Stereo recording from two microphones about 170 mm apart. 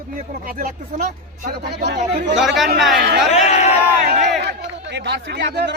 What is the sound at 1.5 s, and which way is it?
Speech, 75° right (ahead or behind).